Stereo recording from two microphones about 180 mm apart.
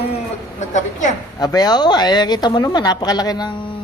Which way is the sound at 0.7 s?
45° left (ahead or behind).